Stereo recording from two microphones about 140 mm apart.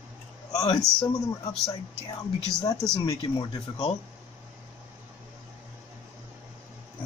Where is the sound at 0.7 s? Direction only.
25° left (ahead or behind).